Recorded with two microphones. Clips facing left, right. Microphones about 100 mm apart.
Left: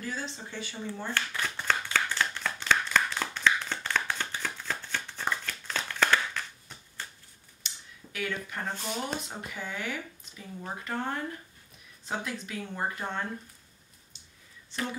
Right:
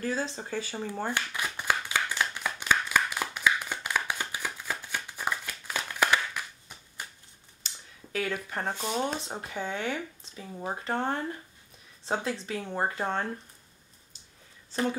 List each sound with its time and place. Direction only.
0.0 s speech: 40° right (ahead or behind)
1.1 s a sound: 15° right (ahead or behind)
7.6 s speech: 35° right (ahead or behind)